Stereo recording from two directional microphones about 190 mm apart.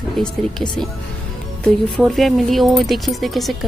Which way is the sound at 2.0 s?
Centre (ahead or behind).